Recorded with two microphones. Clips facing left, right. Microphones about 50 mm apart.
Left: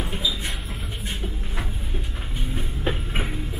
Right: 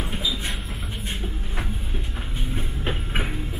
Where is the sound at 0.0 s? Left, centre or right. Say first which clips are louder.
Even; right.